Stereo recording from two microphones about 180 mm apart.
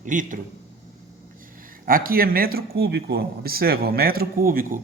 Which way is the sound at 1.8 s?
55° right (ahead or behind).